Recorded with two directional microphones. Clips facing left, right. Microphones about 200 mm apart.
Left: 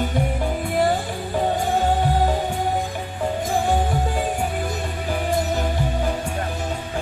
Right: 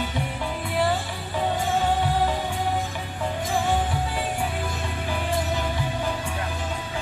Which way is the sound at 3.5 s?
45° left (ahead or behind).